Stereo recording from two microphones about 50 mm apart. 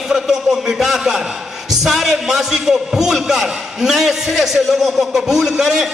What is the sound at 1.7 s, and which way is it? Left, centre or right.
A man's voice, centre.